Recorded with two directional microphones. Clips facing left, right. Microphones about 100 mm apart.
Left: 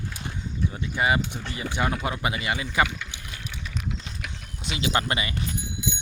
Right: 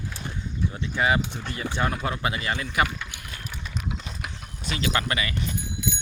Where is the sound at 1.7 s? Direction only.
20° left (ahead or behind).